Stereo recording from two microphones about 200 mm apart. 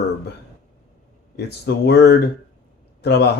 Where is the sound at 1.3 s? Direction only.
55° left (ahead or behind).